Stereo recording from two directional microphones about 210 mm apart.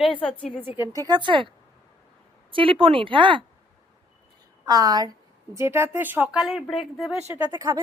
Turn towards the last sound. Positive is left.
turn(degrees=-15)  # may be behind; listen again after turning